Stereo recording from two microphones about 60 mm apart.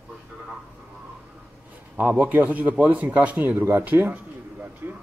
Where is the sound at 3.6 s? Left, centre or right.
Right.